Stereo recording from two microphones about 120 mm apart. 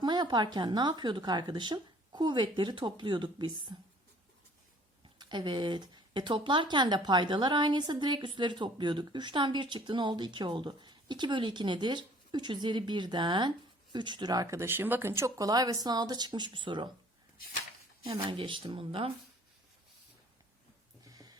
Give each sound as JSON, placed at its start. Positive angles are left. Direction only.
{"t": 0.0, "sound": "speech", "side_deg": -40}
{"t": 5.1, "sound": "speech", "side_deg": -40}
{"t": 18.0, "sound": "speech", "side_deg": -45}
{"t": 21.1, "sound": "a sound", "side_deg": -30}